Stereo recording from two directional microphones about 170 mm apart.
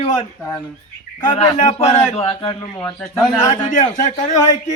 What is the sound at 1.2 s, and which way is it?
A man's voice, 35° left (ahead or behind).